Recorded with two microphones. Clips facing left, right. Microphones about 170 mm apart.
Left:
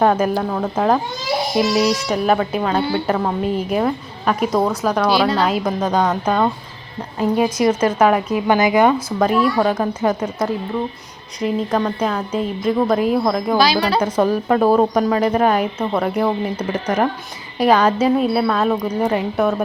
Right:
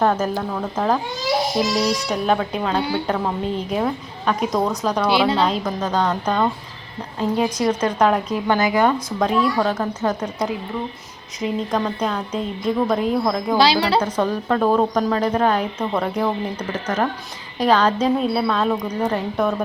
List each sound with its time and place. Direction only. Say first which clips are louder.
0.0 s a woman's voice: left 3 dB; 10° left (ahead or behind)
1.7 s a woman's voice: left 3 dB; 5° left (ahead or behind)
13.6 s speech: right 2 dB; 30° right (ahead or behind)
14.0 s a woman's voice: left 4 dB; 10° left (ahead or behind)